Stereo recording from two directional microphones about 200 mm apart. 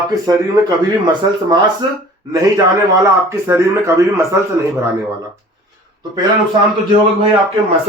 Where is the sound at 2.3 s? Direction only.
15° right (ahead or behind).